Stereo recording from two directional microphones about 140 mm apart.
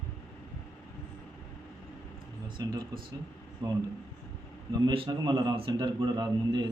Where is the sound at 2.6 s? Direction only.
25° right (ahead or behind).